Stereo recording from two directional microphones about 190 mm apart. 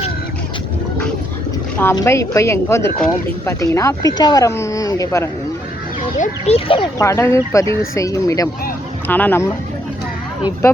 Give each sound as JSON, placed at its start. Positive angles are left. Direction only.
{"t": 1.8, "sound": "speech", "side_deg": 15}
{"t": 6.1, "sound": "speech", "side_deg": 40}
{"t": 7.0, "sound": "speech", "side_deg": 15}